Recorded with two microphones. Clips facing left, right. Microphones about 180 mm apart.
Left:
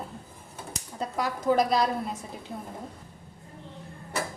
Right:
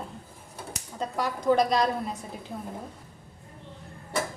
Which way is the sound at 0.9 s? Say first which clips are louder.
Even; 5° left (ahead or behind).